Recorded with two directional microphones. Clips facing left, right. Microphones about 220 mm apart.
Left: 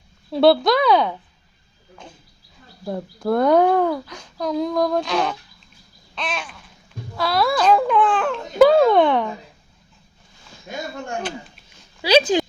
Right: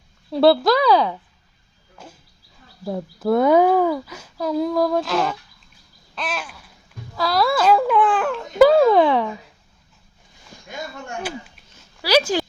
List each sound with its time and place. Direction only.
0.3 s speech: centre (ahead or behind)
2.8 s speech: centre (ahead or behind)
6.1 s babbling: 5° right (ahead or behind)
7.2 s speech: centre (ahead or behind)
12.0 s speech: 20° left (ahead or behind)